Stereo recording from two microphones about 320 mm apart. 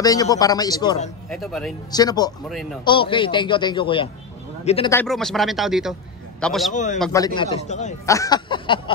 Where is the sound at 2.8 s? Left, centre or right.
Centre.